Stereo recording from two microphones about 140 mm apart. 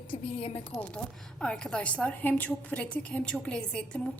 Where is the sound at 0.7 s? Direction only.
5° left (ahead or behind).